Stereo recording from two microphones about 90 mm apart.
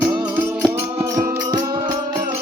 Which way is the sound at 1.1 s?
45° right (ahead or behind).